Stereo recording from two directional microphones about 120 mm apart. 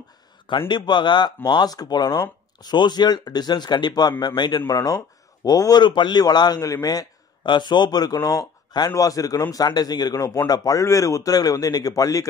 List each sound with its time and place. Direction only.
0.5 s a man's voice: 40° left (ahead or behind)